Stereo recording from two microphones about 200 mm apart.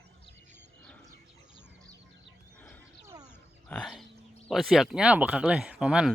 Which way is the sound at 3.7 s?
5° left (ahead or behind).